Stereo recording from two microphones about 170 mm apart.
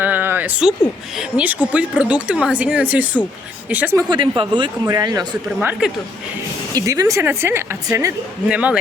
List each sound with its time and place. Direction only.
0.0 s a sound: 10° right (ahead or behind)
1.1 s speech: 5° right (ahead or behind)
4.1 s speech: 25° right (ahead or behind)
5.5 s speech: 5° right (ahead or behind)
6.7 s speech: 20° right (ahead or behind)
8.4 s speech: 5° right (ahead or behind)